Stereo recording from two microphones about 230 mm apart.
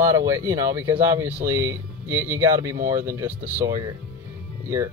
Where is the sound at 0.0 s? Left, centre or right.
Centre.